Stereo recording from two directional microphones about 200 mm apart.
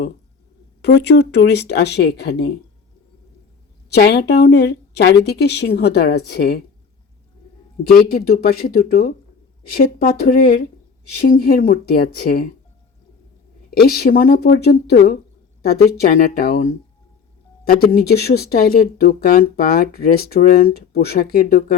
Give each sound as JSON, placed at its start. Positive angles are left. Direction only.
{"t": 0.8, "sound": "speech", "side_deg": 55}
{"t": 3.8, "sound": "speech", "side_deg": 55}
{"t": 7.9, "sound": "speech", "side_deg": 50}
{"t": 13.8, "sound": "speech", "side_deg": 50}
{"t": 17.7, "sound": "speech", "side_deg": 50}